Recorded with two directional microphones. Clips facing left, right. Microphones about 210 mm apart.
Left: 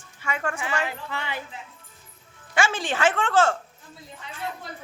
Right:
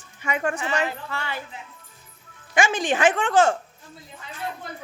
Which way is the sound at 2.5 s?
15° right (ahead or behind).